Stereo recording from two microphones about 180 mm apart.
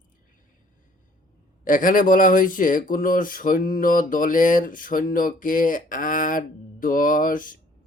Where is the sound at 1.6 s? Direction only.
50° left (ahead or behind).